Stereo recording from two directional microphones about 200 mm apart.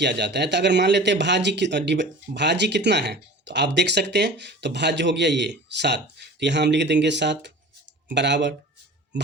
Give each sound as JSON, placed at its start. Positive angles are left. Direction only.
{"t": 0.0, "sound": "speech", "side_deg": -60}